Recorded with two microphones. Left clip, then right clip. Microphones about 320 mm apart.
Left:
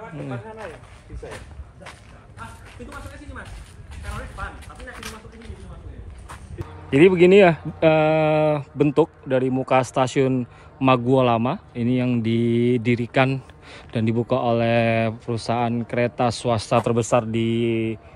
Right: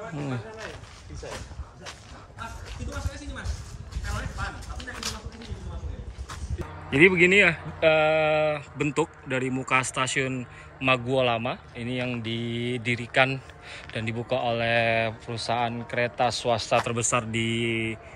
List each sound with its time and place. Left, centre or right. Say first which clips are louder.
6.9 s speech: left 4 dB; centre